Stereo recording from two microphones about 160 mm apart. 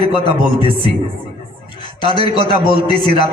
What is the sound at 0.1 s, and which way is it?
Speech, 30° left (ahead or behind).